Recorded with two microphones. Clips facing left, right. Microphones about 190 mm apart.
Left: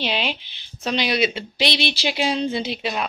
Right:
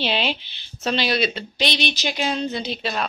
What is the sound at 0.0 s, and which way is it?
A woman's voice, 5° left (ahead or behind).